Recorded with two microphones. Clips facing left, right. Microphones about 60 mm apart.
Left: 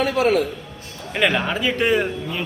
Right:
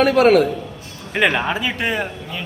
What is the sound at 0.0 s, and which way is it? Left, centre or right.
Speech, right.